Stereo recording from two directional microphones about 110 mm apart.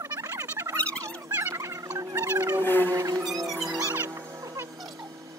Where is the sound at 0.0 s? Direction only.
30° right (ahead or behind).